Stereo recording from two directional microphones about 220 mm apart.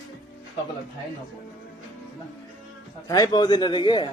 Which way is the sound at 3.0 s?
15° left (ahead or behind).